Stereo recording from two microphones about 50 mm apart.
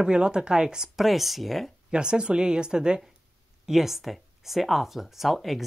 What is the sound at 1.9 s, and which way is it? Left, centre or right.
Speech, centre.